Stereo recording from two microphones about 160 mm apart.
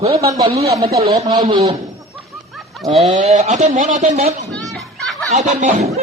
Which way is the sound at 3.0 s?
45° right (ahead or behind).